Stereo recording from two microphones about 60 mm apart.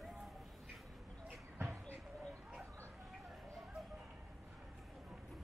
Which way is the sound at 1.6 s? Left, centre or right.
Right.